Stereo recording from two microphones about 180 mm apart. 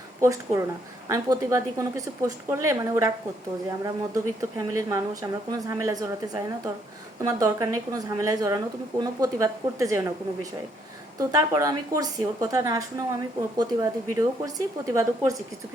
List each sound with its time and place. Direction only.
0.2 s a woman's voice: 15° right (ahead or behind)
11.2 s a woman's voice: 20° right (ahead or behind)